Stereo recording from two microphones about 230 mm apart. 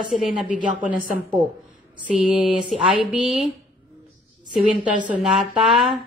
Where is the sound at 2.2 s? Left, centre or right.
Centre.